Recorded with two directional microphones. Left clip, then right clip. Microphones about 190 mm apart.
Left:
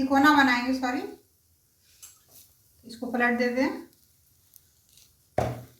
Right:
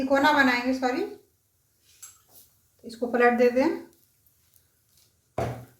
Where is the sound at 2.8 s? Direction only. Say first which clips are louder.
Right 5 dB; 35° right (ahead or behind).